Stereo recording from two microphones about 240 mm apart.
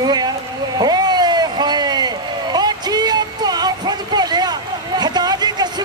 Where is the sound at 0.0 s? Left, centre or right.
Centre.